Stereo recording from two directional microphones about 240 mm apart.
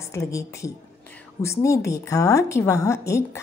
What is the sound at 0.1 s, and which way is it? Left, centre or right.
A woman's voice, centre.